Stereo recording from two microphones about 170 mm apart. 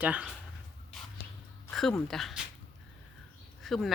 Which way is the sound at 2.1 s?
Centre (ahead or behind).